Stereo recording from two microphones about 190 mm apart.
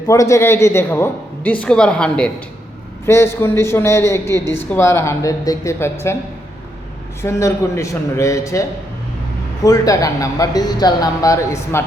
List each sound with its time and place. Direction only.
0.1 s speech: 15° left (ahead or behind)
7.2 s speech: 15° left (ahead or behind)
9.6 s speech: 20° left (ahead or behind)